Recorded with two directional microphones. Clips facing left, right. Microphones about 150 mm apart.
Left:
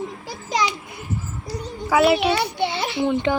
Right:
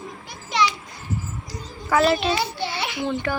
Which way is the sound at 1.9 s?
10° left (ahead or behind).